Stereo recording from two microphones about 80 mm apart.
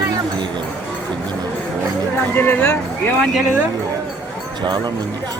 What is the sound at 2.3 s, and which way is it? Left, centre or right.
Speech, left.